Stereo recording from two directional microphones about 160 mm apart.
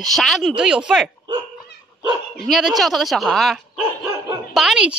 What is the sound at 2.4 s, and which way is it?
Speech, centre (ahead or behind).